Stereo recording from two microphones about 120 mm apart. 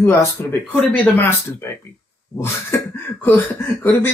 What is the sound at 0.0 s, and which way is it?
A man's voice, 20° left (ahead or behind).